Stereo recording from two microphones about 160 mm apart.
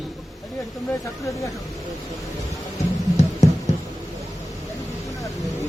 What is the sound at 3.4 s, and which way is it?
Music, 45° left (ahead or behind).